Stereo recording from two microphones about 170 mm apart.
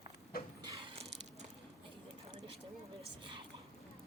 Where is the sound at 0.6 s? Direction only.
30° right (ahead or behind).